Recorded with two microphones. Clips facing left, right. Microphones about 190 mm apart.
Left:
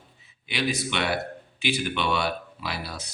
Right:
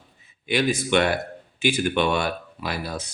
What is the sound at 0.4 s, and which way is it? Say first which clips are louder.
A man's voice: right 5 dB; 50° right (ahead or behind).